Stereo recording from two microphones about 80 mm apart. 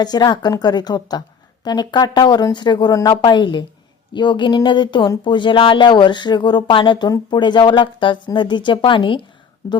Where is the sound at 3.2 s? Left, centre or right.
Left.